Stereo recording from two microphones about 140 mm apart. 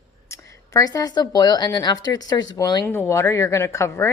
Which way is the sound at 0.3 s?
25° left (ahead or behind).